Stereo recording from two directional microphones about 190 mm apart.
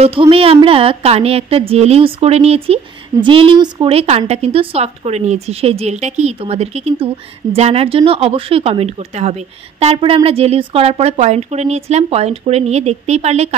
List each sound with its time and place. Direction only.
0.0 s speech: 30° right (ahead or behind)